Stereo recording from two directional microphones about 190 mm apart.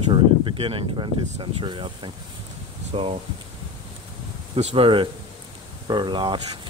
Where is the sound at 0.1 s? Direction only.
25° right (ahead or behind).